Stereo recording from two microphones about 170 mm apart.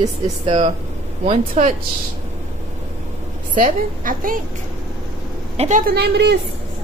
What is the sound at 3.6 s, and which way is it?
Speech, 55° right (ahead or behind).